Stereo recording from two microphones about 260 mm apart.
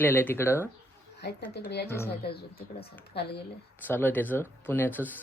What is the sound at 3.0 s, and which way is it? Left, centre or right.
Speech, left.